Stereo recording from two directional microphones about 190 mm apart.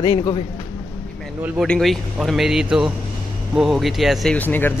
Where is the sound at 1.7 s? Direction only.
Centre (ahead or behind).